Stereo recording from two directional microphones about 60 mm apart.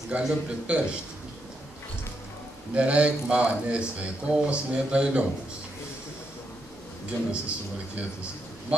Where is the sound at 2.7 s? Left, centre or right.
Centre.